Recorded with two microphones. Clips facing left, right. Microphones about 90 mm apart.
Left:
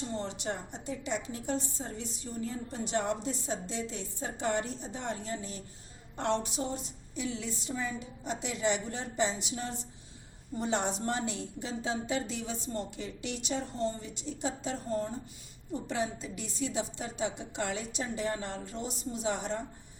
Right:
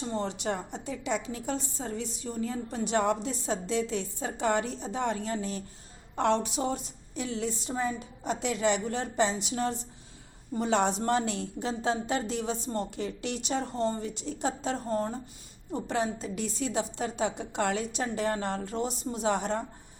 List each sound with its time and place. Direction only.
0.2 s a woman's voice: 90° right; by 5.6 s 70° right (ahead or behind)
6.1 s a woman's voice: 90° right
7.2 s a woman's voice: 45° right (ahead or behind)
10.6 s a woman's voice: 70° right (ahead or behind)